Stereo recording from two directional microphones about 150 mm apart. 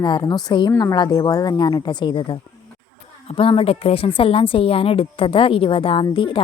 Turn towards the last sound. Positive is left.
turn(degrees=35)  # may be behind; listen again after turning